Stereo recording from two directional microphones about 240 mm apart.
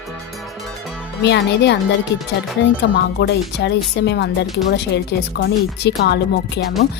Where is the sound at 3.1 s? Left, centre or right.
Left.